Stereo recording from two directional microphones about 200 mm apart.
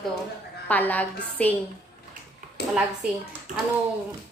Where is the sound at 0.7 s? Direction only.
10° left (ahead or behind).